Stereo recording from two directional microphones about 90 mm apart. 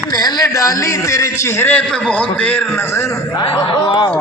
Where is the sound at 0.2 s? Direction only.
45° left (ahead or behind).